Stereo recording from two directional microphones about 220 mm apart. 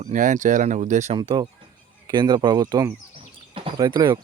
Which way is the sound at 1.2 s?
20° right (ahead or behind).